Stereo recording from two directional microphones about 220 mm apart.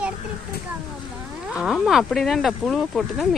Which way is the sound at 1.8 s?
Centre (ahead or behind).